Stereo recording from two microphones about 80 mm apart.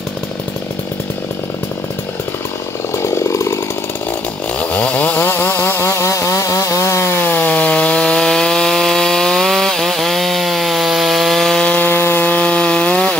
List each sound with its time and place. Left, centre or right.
3.0 s chainsaw: left
4.6 s chainsaw: centre
11.7 s wood: left